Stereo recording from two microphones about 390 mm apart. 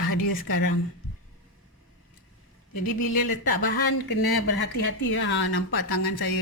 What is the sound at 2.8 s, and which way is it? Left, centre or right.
Speech, left.